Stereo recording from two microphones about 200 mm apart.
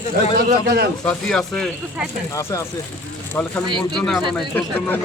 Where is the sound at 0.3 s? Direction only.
55° right (ahead or behind).